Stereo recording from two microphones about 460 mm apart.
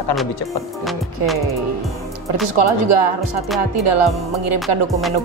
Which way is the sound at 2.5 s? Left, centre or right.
Right.